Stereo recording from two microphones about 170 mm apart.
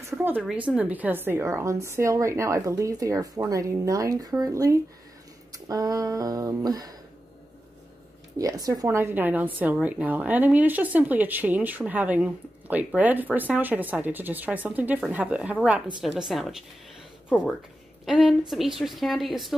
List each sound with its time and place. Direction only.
0.0 s a woman's voice: 10° right (ahead or behind)
5.7 s a sound: 20° right (ahead or behind)
8.4 s a woman's voice: 20° right (ahead or behind); by 19.5 s centre (ahead or behind)